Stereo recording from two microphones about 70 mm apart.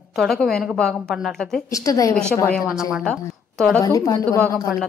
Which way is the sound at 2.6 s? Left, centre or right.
Centre.